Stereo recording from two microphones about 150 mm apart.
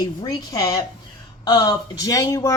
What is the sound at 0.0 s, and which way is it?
A woman's voice, 25° left (ahead or behind).